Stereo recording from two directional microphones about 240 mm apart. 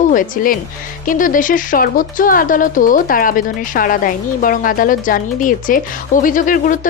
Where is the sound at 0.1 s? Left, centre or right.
Left.